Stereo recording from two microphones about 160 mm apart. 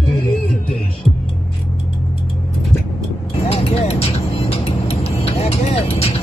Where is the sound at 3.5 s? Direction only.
40° left (ahead or behind).